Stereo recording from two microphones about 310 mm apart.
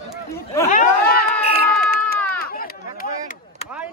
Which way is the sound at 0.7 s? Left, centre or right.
Left.